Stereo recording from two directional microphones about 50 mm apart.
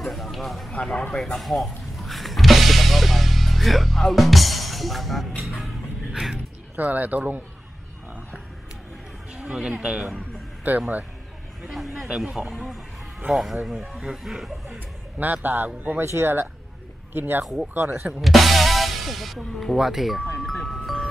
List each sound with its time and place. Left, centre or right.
0.0 s a man's voice: centre
1.1 s music: centre
5.4 s speech: centre
6.8 s a man's voice: right
9.7 s a man's voice: centre
10.7 s a man's voice: right
11.6 s a man's voice: centre
15.1 s a man's voice: right
16.0 s speech: right
18.2 s a man's voice: centre
20.4 s music: centre